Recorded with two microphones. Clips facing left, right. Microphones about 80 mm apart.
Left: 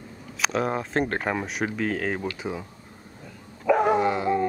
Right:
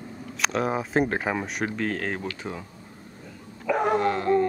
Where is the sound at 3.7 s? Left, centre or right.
Centre.